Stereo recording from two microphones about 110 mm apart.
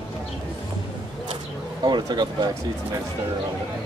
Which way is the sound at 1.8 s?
40° right (ahead or behind).